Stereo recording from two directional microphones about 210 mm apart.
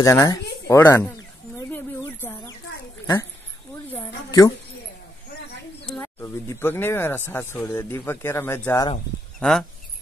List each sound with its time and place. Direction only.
0.0 s speech: 15° left (ahead or behind)
2.0 s a sound: 10° left (ahead or behind)
4.3 s speech: 15° left (ahead or behind)
5.9 s speech: 10° left (ahead or behind)
9.4 s speech: 5° left (ahead or behind)